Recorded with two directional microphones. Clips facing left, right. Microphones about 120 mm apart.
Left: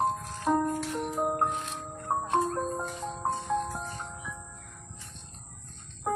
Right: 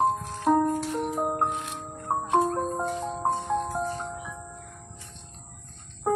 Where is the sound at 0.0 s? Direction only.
15° right (ahead or behind).